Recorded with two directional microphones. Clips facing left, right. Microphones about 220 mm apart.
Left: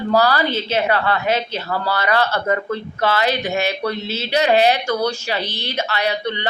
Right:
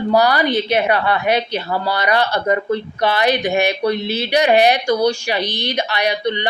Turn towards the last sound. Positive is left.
turn(degrees=-15)  # may be behind; listen again after turning